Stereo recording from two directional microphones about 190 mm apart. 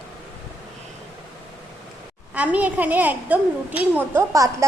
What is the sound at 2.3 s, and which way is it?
A woman's voice, 5° right (ahead or behind).